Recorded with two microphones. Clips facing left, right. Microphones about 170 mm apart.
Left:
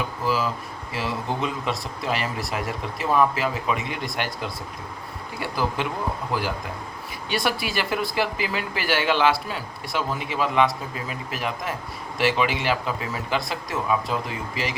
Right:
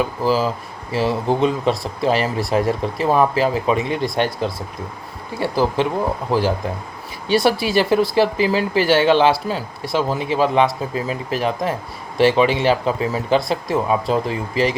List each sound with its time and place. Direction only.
0.2 s speech: 35° right (ahead or behind)
7.3 s speech: 30° right (ahead or behind)